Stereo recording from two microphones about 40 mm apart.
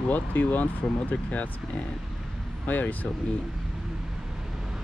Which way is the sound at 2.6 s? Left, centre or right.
Left.